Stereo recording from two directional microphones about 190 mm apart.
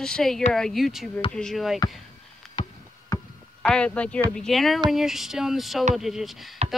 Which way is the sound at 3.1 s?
20° left (ahead or behind).